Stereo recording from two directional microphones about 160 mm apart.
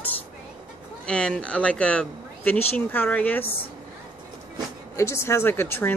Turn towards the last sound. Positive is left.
turn(degrees=15)  # may be behind; listen again after turning